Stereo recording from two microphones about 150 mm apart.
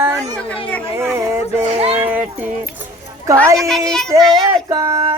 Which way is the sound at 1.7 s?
40° right (ahead or behind).